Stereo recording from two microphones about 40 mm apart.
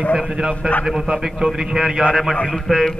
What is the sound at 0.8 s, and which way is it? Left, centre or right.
Speech, centre.